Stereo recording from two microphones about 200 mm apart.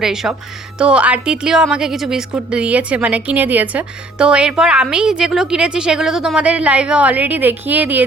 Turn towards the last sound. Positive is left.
turn(degrees=-10)  # may be behind; listen again after turning